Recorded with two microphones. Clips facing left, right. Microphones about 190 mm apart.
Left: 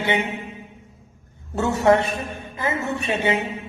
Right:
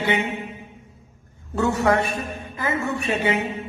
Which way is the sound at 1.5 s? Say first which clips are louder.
Left 2 dB; 25° left (ahead or behind).